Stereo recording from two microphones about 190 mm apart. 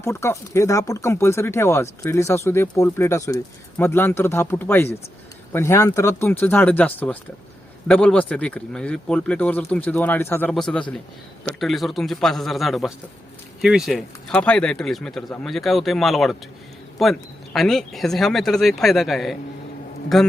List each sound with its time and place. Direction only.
0.0 s speech: 15° left (ahead or behind)